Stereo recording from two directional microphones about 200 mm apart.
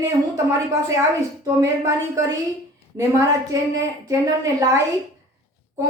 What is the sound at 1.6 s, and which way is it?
Speech, 15° right (ahead or behind).